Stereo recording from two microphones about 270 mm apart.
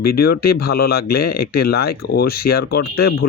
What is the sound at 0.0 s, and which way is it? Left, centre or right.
Speech, left.